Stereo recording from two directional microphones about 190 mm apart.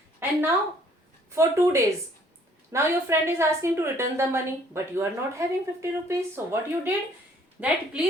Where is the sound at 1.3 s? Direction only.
15° right (ahead or behind).